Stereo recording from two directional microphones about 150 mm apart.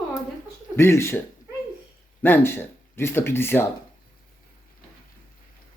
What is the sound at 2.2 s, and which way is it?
Speech, 15° left (ahead or behind).